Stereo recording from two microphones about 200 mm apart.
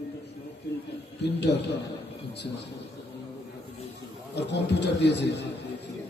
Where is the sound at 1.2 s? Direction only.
55° left (ahead or behind).